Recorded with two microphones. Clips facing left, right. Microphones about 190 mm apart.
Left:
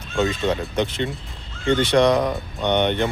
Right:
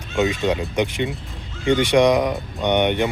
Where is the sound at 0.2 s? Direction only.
15° right (ahead or behind).